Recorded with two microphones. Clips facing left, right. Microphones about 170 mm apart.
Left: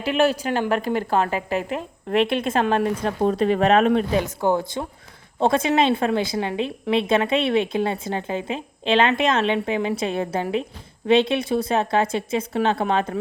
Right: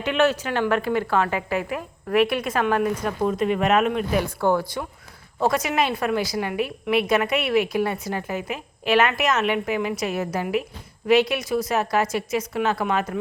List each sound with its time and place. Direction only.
0.0 s a woman's voice: 35° left (ahead or behind)
4.2 s a woman's voice: 20° left (ahead or behind)